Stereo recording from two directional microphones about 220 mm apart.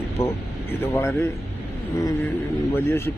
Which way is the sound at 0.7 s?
10° left (ahead or behind).